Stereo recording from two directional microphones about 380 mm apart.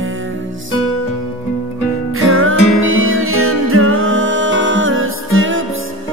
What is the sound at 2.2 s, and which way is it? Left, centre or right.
Music, right.